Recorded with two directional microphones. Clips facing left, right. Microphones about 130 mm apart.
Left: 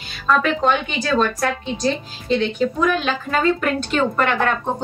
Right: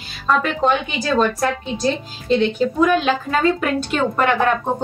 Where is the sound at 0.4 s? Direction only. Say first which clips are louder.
Even; 5° right (ahead or behind).